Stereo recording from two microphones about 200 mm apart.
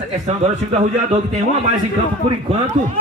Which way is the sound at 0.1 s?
35° right (ahead or behind).